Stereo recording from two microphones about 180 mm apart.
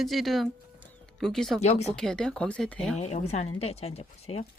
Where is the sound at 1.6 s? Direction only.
35° left (ahead or behind).